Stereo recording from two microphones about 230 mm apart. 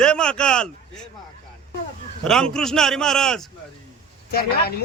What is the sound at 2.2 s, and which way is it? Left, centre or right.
A man's voice, centre.